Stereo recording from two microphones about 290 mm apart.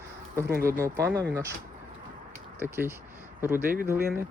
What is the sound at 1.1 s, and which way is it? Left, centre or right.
Speech, right.